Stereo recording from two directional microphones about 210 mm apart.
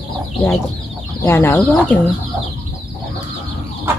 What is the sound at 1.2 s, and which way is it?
Speech, 10° left (ahead or behind).